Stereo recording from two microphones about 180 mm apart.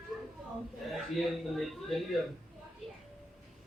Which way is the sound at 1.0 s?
Centre (ahead or behind).